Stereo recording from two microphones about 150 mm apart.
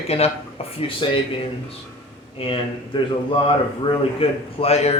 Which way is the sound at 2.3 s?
35° left (ahead or behind).